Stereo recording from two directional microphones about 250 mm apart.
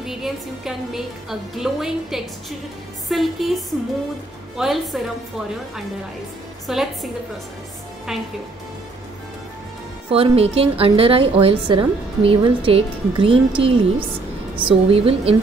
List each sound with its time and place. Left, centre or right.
0.0 s a woman's voice: centre
4.6 s a woman's voice: centre
6.7 s a woman's voice: centre
8.1 s a woman's voice: centre
10.1 s a woman's voice: right